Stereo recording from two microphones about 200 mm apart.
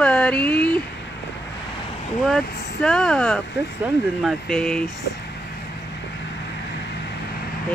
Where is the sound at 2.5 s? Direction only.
55° left (ahead or behind).